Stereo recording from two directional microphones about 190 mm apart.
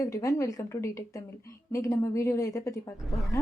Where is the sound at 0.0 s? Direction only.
15° left (ahead or behind).